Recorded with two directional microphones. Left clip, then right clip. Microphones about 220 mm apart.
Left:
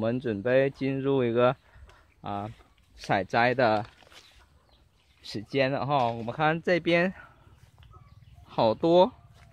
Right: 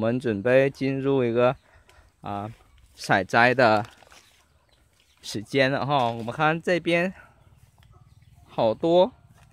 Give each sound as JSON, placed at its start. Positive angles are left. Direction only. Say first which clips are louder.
{"t": 0.0, "sound": "speech", "louder": "right 4 dB", "side_deg": -25}
{"t": 3.0, "sound": "speech", "louder": "right 5 dB", "side_deg": -30}
{"t": 5.2, "sound": "speech", "louder": "right 4 dB", "side_deg": -30}
{"t": 8.5, "sound": "speech", "louder": "right 1 dB", "side_deg": -5}